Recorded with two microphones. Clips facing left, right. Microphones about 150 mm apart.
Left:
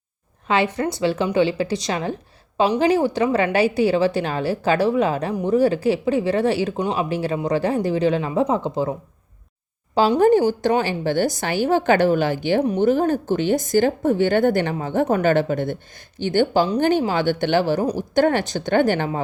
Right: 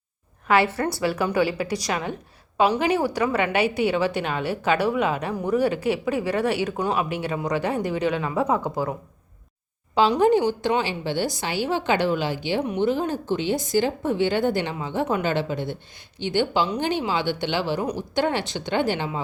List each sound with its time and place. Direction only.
0.4 s a woman's voice: 20° left (ahead or behind)
10.2 s speech: 45° left (ahead or behind)